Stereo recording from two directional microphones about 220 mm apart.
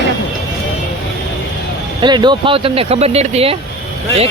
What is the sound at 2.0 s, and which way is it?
Speech, 20° right (ahead or behind).